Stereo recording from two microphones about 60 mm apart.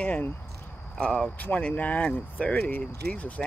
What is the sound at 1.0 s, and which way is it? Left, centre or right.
Speech, centre.